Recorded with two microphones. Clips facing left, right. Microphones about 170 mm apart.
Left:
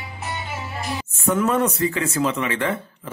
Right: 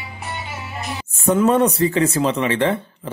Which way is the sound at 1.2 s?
30° right (ahead or behind).